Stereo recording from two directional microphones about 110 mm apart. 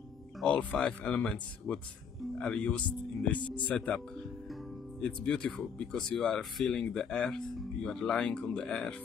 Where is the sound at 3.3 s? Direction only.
45° left (ahead or behind).